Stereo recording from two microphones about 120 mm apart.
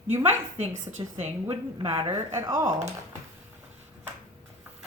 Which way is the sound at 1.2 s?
55° right (ahead or behind).